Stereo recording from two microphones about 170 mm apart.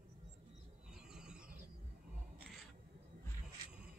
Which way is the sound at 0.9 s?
5° right (ahead or behind).